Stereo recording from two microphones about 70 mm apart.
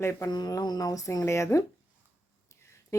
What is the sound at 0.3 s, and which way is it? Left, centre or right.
Speech, left.